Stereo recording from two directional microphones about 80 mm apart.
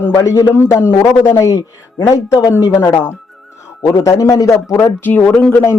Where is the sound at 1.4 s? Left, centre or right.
Left.